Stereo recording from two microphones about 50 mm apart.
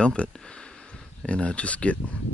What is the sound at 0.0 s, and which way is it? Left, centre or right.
Speech, left.